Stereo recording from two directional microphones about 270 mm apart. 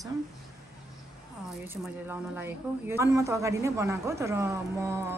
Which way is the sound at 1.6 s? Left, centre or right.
Centre.